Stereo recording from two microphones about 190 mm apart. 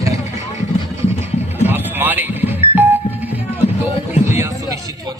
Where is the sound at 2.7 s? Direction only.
10° right (ahead or behind).